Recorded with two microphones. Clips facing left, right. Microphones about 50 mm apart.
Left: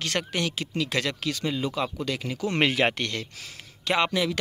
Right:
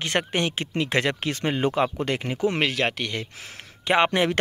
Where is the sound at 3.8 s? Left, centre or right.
Right.